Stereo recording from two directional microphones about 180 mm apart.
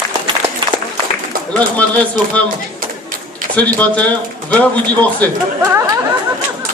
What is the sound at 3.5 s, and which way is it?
Speech, 5° left (ahead or behind).